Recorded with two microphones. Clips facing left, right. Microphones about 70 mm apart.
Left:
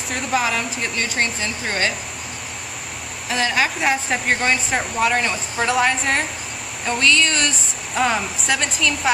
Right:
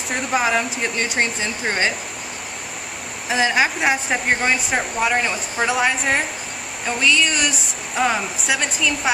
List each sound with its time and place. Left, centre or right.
0.1 s a woman's voice: centre
0.9 s speech: centre
3.3 s a woman's voice: centre